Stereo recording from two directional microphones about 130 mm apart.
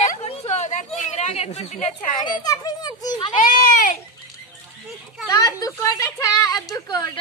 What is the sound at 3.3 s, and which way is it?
Speech, 90° left.